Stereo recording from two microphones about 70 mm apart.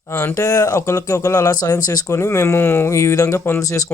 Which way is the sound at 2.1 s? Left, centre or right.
Left.